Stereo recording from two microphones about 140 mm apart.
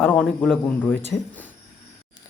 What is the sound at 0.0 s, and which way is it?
Speech, 10° left (ahead or behind).